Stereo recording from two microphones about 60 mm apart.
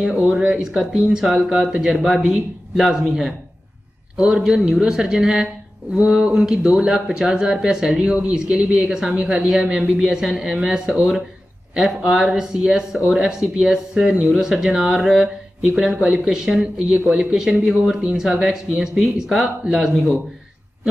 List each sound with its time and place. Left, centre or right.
0.1 s speech: right
0.4 s speech: centre
9.9 s speech: centre